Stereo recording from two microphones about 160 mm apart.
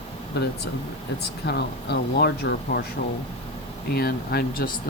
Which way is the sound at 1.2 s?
90° left.